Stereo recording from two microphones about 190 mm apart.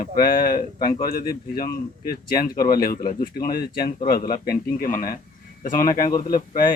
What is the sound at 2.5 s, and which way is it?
Speech, 20° left (ahead or behind).